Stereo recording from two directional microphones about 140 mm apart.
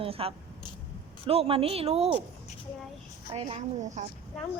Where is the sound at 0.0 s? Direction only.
45° right (ahead or behind).